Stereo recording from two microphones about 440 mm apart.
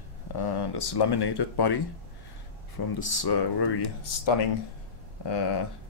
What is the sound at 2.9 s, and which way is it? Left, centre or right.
Speech, left.